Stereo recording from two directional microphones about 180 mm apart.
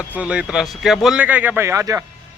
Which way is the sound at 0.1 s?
5° right (ahead or behind).